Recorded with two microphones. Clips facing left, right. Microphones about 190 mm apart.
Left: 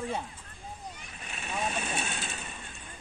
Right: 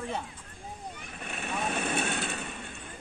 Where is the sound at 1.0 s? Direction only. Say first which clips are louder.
Right 4 dB; 55° right (ahead or behind).